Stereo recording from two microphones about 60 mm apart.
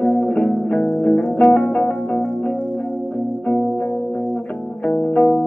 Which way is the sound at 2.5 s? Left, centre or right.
Centre.